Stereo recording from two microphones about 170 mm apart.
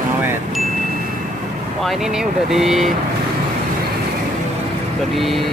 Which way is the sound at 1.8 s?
Centre (ahead or behind).